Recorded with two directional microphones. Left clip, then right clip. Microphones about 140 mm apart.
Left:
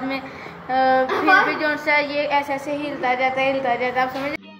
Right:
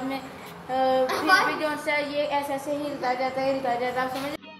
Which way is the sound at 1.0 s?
90° left.